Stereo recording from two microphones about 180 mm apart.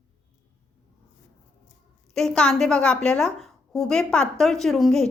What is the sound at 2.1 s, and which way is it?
A woman's voice, 5° left (ahead or behind).